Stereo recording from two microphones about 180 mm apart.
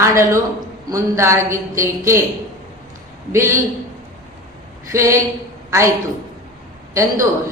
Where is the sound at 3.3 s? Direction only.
15° right (ahead or behind).